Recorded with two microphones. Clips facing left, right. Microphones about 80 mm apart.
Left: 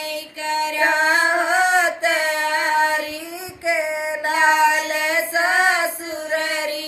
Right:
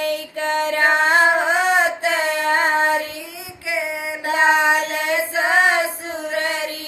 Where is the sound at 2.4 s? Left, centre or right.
Right.